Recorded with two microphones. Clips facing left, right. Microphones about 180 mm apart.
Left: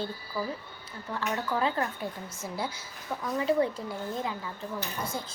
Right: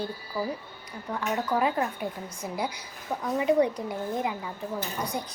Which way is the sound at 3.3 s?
15° right (ahead or behind).